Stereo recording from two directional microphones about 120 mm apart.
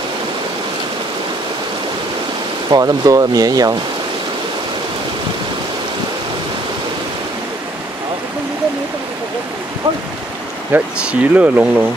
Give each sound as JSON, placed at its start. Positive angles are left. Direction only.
{"t": 2.7, "sound": "speech", "side_deg": -30}
{"t": 10.7, "sound": "speech", "side_deg": -15}